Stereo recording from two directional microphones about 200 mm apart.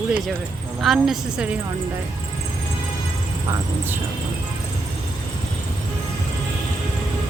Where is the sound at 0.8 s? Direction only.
Centre (ahead or behind).